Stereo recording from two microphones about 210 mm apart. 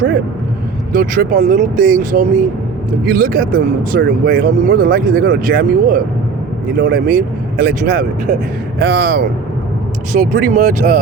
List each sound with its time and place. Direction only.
0.9 s speech: 40° right (ahead or behind)
10.1 s speech: 40° right (ahead or behind)